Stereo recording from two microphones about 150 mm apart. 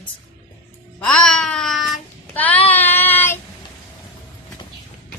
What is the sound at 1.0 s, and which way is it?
Babbling, 5° left (ahead or behind).